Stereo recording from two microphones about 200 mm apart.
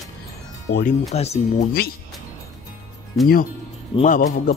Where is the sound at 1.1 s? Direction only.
30° left (ahead or behind).